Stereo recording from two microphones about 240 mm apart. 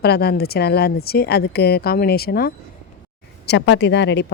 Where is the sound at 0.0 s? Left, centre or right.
Left.